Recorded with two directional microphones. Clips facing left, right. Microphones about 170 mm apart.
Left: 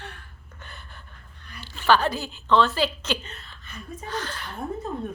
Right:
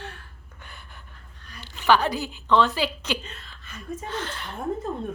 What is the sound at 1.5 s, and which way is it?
A woman's voice, 15° right (ahead or behind).